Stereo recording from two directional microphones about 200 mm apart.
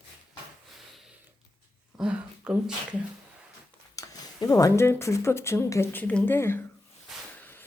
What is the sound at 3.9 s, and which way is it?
Speech, 15° left (ahead or behind).